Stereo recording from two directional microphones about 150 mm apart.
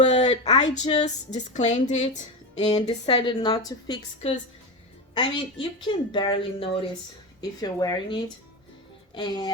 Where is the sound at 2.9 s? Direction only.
35° left (ahead or behind).